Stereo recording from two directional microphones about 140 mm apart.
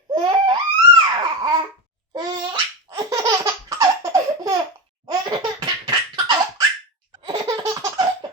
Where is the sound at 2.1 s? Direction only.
35° right (ahead or behind).